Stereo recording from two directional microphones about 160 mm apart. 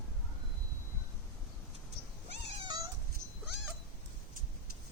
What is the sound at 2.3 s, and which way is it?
Cat, 25° right (ahead or behind).